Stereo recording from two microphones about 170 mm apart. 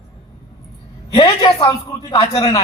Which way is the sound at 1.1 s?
25° left (ahead or behind).